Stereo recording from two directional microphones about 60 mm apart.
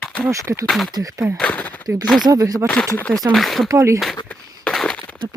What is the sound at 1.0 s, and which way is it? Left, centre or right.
Speech, right.